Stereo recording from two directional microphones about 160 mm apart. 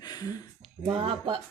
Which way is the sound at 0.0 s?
25° left (ahead or behind).